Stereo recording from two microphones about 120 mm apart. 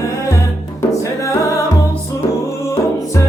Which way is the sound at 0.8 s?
25° left (ahead or behind).